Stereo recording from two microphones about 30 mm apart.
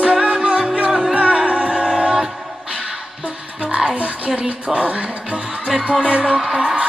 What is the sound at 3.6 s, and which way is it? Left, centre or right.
Music, right.